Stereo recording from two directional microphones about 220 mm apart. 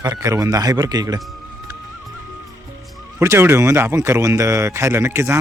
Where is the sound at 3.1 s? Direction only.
10° right (ahead or behind).